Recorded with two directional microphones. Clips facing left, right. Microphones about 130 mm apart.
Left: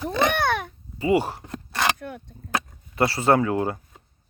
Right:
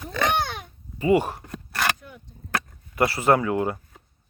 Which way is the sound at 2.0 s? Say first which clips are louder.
Left 9 dB; 70° left (ahead or behind).